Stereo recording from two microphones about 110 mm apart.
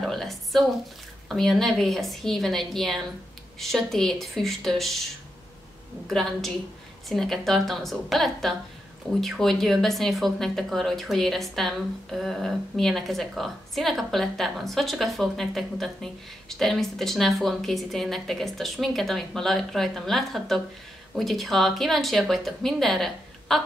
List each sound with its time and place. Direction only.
0.0 s a sound: centre (ahead or behind)
1.3 s speech: centre (ahead or behind)
6.0 s speech: centre (ahead or behind)